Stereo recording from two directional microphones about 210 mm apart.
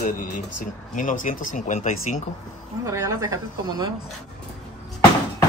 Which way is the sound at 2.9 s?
15° right (ahead or behind).